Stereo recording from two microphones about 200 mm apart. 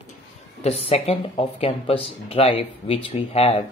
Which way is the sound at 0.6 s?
30° left (ahead or behind).